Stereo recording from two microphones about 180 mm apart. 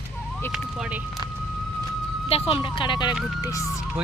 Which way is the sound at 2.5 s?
25° left (ahead or behind).